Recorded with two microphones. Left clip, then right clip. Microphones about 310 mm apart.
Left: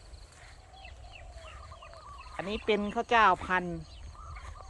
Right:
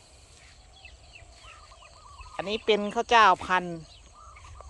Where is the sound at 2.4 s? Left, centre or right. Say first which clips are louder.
Right 5 dB; centre.